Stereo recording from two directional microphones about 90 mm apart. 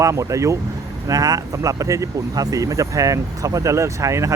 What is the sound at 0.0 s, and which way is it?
Speech, 35° right (ahead or behind).